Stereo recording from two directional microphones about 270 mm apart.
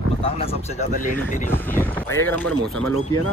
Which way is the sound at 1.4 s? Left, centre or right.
Centre.